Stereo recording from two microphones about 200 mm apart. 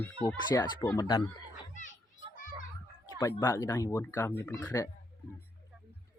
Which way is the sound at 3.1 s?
20° left (ahead or behind).